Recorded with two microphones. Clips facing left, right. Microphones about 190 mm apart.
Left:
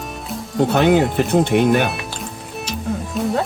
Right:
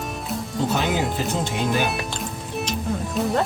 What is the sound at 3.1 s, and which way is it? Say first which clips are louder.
Speech: left 2 dB; centre (ahead or behind).